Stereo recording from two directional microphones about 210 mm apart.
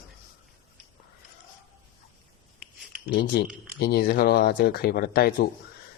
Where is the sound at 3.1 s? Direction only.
40° left (ahead or behind).